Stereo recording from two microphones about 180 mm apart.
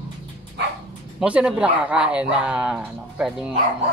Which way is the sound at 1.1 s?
5° right (ahead or behind).